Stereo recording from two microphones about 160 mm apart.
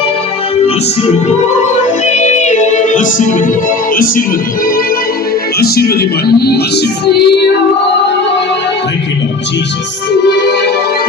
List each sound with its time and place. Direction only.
2.1 s music: 50° left (ahead or behind)
5.5 s music: 75° left (ahead or behind); by 7.3 s 90° left